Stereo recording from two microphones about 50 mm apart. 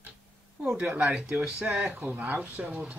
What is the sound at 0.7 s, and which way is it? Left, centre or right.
Speech, right.